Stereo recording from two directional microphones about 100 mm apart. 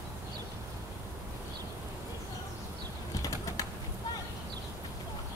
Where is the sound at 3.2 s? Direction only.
35° left (ahead or behind).